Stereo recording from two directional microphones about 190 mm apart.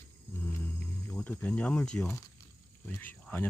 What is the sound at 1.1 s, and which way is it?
Speech, 10° left (ahead or behind).